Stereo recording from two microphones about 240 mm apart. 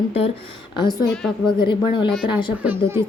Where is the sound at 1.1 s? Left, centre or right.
Centre.